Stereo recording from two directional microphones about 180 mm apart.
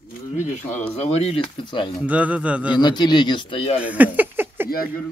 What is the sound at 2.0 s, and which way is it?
Speech, 10° right (ahead or behind).